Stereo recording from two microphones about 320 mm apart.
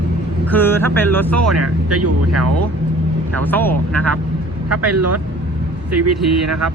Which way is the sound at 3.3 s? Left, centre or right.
Centre.